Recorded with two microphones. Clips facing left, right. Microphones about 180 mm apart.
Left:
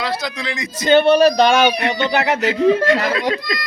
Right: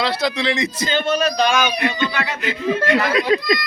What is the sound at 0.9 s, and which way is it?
Speech, 65° left (ahead or behind).